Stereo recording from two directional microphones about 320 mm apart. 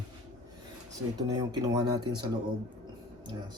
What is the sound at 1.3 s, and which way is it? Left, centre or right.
Speech, centre.